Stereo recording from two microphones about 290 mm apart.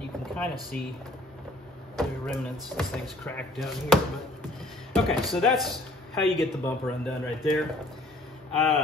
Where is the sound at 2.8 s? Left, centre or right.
Centre.